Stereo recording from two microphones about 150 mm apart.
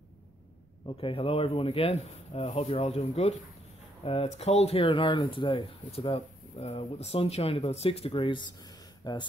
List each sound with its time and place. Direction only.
0.8 s speech: 35° left (ahead or behind)